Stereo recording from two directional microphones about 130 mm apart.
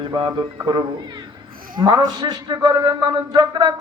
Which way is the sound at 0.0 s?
35° right (ahead or behind).